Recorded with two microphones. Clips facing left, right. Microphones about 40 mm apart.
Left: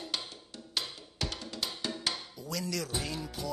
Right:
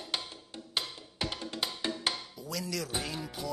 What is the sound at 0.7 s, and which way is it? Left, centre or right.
Music, right.